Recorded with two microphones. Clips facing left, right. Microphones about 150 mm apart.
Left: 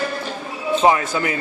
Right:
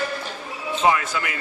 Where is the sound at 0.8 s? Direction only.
30° left (ahead or behind).